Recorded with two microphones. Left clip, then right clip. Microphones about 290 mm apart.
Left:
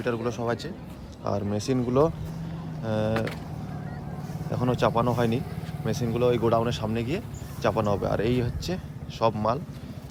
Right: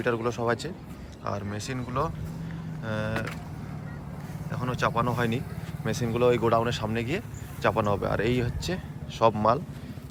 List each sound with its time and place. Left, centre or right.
0.0 s speech: centre
1.2 s speech: centre
4.5 s speech: centre